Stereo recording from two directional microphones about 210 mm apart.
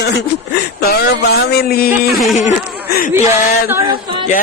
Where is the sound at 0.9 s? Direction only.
50° left (ahead or behind).